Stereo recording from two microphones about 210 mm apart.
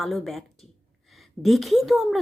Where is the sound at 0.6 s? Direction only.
Centre (ahead or behind).